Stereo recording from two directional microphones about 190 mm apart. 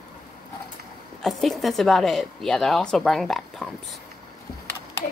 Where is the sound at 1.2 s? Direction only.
Centre (ahead or behind).